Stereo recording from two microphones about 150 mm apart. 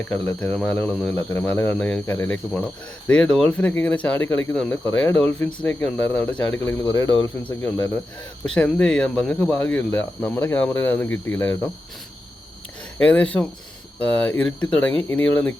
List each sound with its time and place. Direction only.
0.0 s speech: 10° left (ahead or behind)
6.8 s speech: 25° left (ahead or behind)
7.4 s speech: 10° left (ahead or behind)
13.0 s speech: 10° left (ahead or behind)